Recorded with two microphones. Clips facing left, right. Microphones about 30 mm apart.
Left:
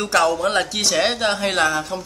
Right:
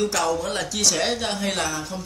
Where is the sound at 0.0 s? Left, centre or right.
Left.